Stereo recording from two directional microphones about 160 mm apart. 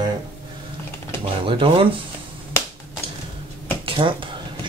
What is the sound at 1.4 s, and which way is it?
Speech, 35° right (ahead or behind).